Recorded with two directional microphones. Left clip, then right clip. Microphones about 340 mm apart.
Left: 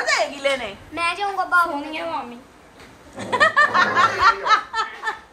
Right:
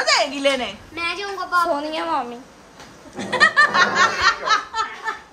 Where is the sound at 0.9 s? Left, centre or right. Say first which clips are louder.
Left 5 dB; centre.